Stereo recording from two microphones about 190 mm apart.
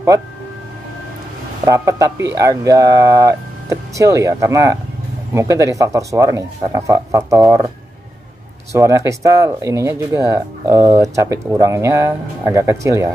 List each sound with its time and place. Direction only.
1.7 s speech: 15° right (ahead or behind)
8.7 s speech: 15° right (ahead or behind)